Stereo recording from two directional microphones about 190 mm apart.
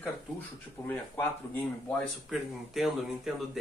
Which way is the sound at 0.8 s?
10° left (ahead or behind).